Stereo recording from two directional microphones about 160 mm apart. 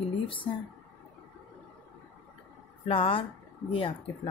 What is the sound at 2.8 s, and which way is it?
Speech, 35° left (ahead or behind).